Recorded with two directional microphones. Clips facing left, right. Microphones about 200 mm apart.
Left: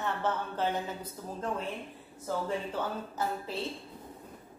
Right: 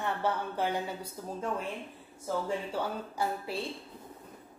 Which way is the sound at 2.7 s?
10° right (ahead or behind).